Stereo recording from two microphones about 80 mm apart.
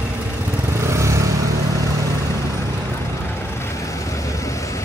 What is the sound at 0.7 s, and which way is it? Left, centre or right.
Vehicle, right.